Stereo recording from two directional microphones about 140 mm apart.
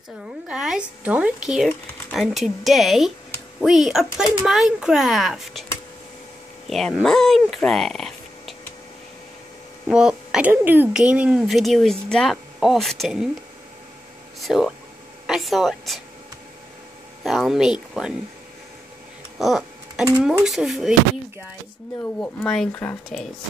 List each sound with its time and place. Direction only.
0.5 s a woman's voice: 5° right (ahead or behind)
6.7 s speech: 5° left (ahead or behind)
9.8 s speech: 5° right (ahead or behind)
14.4 s speech: centre (ahead or behind)
17.2 s speech: centre (ahead or behind)
19.3 s a sound: centre (ahead or behind)
20.4 s speech: centre (ahead or behind)
22.2 s speech: 15° left (ahead or behind)